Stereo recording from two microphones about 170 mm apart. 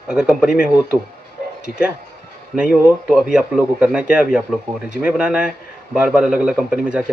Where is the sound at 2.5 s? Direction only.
5° right (ahead or behind).